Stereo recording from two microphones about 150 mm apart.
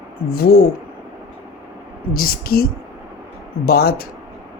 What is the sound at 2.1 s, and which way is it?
Speech, 75° left (ahead or behind).